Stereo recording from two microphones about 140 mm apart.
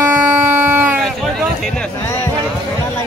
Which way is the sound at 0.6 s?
15° right (ahead or behind).